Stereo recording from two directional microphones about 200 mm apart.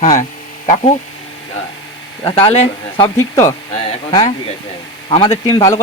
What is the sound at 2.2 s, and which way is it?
Speech, 25° left (ahead or behind).